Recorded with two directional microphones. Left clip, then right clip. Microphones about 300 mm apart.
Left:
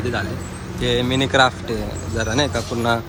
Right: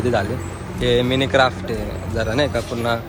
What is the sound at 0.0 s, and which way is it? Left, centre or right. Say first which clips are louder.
Speech: right 4 dB; centre.